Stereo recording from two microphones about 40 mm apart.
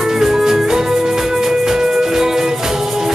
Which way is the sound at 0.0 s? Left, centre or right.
Centre.